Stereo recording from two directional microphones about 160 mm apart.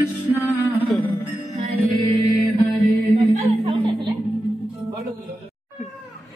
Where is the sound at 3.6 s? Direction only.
35° right (ahead or behind).